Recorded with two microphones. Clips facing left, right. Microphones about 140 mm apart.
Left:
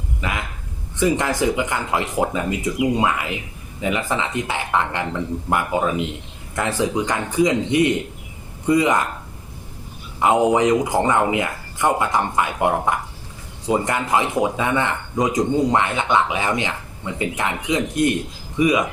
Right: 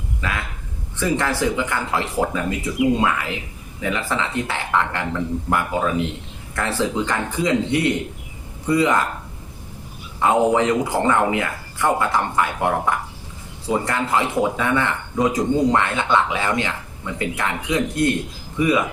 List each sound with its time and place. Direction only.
0.2 s a man's voice: 20° left (ahead or behind)
10.2 s a man's voice: 15° left (ahead or behind)